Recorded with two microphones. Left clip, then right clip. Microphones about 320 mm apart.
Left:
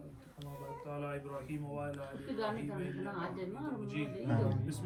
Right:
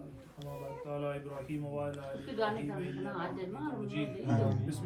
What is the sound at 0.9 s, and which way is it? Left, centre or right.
Speech, centre.